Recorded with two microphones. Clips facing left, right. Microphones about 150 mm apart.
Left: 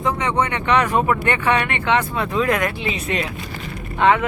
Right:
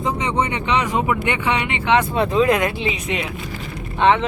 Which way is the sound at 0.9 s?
50° left (ahead or behind).